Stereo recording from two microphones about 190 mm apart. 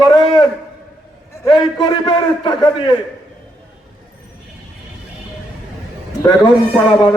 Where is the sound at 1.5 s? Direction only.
25° left (ahead or behind).